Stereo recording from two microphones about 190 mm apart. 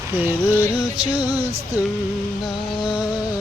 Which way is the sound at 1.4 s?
30° right (ahead or behind).